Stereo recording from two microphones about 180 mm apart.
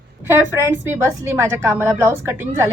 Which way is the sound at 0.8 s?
15° right (ahead or behind).